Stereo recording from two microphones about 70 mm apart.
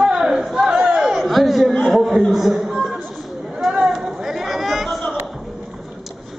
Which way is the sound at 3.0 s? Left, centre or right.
Centre.